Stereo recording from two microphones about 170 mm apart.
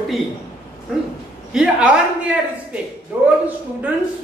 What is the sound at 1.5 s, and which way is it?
Speech, 5° right (ahead or behind).